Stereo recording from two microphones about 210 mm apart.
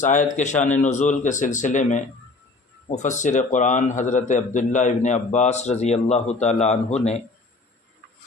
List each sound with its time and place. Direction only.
0.0 s a man's voice: 35° left (ahead or behind)